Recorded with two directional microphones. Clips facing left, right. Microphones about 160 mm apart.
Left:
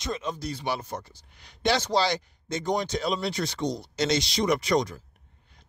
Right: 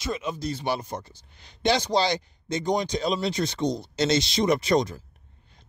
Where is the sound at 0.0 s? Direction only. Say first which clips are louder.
Right 2 dB; 10° right (ahead or behind).